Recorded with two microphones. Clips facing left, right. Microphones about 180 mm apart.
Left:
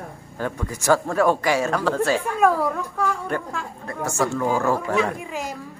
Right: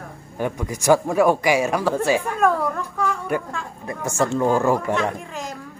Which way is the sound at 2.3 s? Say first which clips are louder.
Left 1 dB; 5° left (ahead or behind).